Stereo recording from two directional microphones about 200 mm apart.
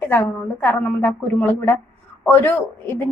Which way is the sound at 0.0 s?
10° left (ahead or behind).